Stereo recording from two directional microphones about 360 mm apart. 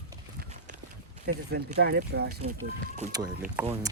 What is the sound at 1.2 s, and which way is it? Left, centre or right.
Speech, right.